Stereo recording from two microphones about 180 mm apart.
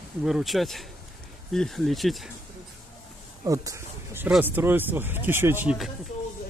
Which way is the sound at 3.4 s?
20° right (ahead or behind).